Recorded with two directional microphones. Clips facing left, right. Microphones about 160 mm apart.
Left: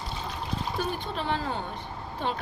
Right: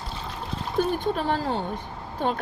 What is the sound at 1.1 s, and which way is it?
Speech, 45° right (ahead or behind).